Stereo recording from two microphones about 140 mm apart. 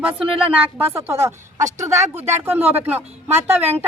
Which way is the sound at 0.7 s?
15° right (ahead or behind).